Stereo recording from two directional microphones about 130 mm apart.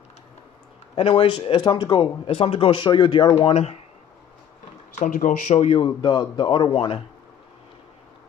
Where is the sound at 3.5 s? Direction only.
50° left (ahead or behind).